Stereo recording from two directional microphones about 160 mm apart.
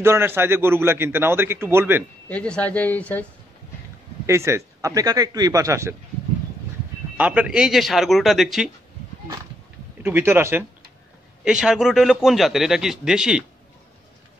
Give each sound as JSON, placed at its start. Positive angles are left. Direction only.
{"t": 0.0, "sound": "a man's voice", "side_deg": -15}
{"t": 2.2, "sound": "speech", "side_deg": 5}
{"t": 4.3, "sound": "a man's voice", "side_deg": -15}
{"t": 7.2, "sound": "a man's voice", "side_deg": -10}
{"t": 10.0, "sound": "a man's voice", "side_deg": -15}
{"t": 11.4, "sound": "a man's voice", "side_deg": -5}